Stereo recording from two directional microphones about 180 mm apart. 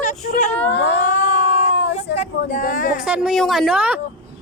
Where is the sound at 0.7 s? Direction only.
70° left (ahead or behind).